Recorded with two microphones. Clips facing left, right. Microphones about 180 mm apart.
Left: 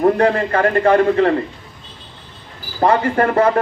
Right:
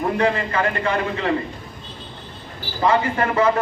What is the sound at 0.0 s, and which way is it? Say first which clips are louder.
A man's voice: left 6 dB; 50° left (ahead or behind).